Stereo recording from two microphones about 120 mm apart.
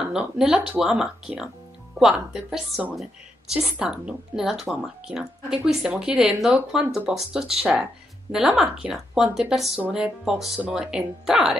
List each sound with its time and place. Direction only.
0.1 s a woman's voice: 5° right (ahead or behind)